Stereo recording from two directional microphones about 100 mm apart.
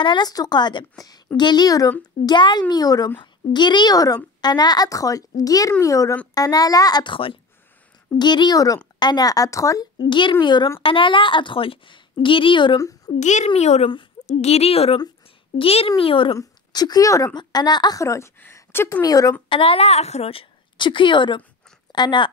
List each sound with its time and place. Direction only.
0.0 s a woman's voice: 45° left (ahead or behind)
8.2 s a child's voice: 45° left (ahead or behind)
10.0 s a woman's voice: 55° left (ahead or behind)
10.8 s a woman's voice: 60° left (ahead or behind)
12.7 s a child's voice: 35° left (ahead or behind)
13.5 s a woman's voice: 90° left
15.5 s a woman's voice: 70° left (ahead or behind)
16.0 s a woman's voice: 60° left (ahead or behind)
16.3 s a woman's voice: 40° left (ahead or behind); by 19.0 s 25° left (ahead or behind)
19.0 s a child's voice: 35° left (ahead or behind)
19.5 s a woman's voice: 70° left (ahead or behind); by 22.3 s 50° left (ahead or behind)